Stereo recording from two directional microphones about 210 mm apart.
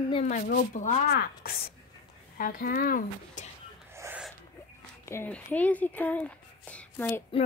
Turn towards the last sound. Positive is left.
turn(degrees=10)  # may be behind; listen again after turning